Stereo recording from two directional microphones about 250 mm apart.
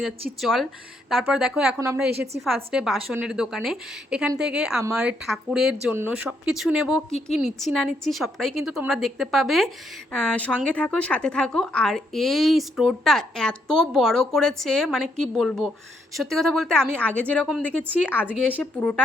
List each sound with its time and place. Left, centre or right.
0.4 s a woman's voice: centre
2.4 s a woman's voice: centre
18.4 s a woman's voice: centre